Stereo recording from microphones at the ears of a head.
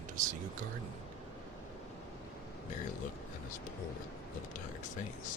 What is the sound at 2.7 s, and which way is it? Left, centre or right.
Speech, left.